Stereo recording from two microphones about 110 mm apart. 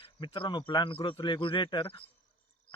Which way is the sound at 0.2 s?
45° left (ahead or behind).